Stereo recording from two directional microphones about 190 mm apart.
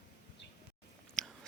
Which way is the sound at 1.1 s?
5° left (ahead or behind).